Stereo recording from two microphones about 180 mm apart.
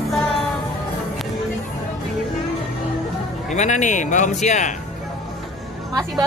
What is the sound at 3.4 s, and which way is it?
A man's voice, 40° left (ahead or behind).